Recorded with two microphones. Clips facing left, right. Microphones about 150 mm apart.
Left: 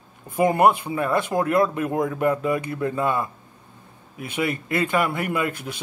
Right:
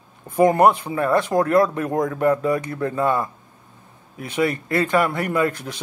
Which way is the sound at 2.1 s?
15° left (ahead or behind).